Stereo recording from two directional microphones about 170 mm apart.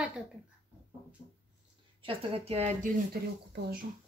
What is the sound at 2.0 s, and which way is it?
Speech, 30° right (ahead or behind).